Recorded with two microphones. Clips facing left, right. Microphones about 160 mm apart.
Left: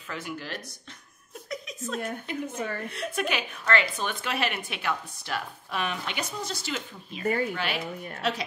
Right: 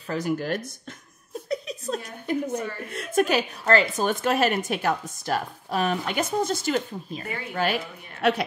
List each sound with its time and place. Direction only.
0.1 s speech: 45° right (ahead or behind)
1.5 s a sound: 35° right (ahead or behind)
2.2 s speech: 45° right (ahead or behind)